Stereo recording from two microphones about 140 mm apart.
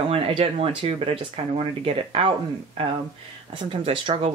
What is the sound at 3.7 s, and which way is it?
Speech, 40° right (ahead or behind).